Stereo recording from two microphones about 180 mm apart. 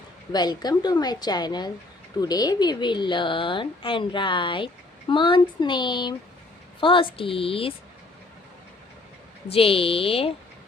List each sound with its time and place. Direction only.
0.3 s a woman's voice: 25° left (ahead or behind)
9.5 s speech: 30° left (ahead or behind)